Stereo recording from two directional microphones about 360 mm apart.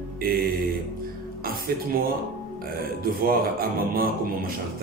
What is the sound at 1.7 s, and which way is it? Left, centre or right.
Speech, right.